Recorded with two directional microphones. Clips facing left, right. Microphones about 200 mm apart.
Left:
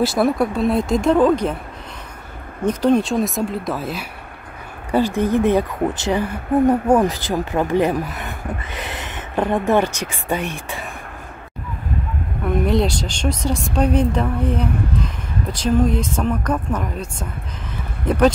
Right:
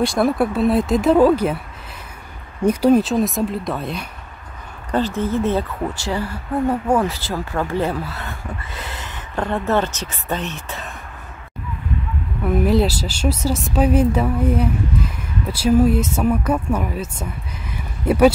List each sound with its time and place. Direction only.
0.0 s speech: centre (ahead or behind)
2.6 s speech: 10° right (ahead or behind)
4.9 s speech: 15° left (ahead or behind)
12.4 s speech: 5° right (ahead or behind)